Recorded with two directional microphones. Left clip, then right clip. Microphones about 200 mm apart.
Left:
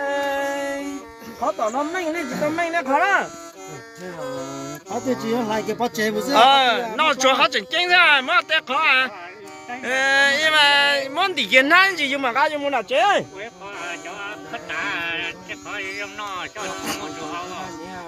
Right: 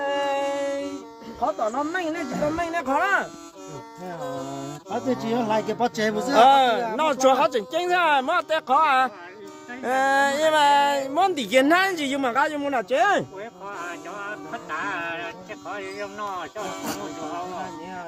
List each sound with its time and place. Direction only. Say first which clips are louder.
0.0 s a sound: left 1 dB; 45° left (ahead or behind)
1.4 s speech: left 2 dB; 45° left (ahead or behind)
5.1 s speech: even; 20° left (ahead or behind)
6.3 s speech: left 1 dB; 55° right (ahead or behind)
13.7 s music: left 3 dB; 40° right (ahead or behind)